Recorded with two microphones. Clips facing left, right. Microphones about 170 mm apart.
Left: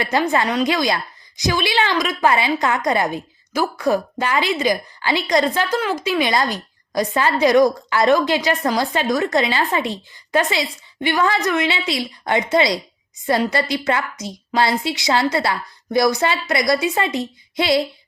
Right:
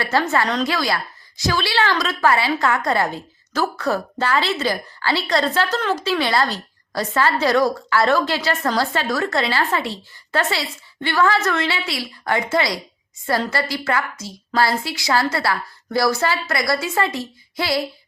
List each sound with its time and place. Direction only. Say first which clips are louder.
0.0 s a woman's voice: left 1 dB; 15° left (ahead or behind)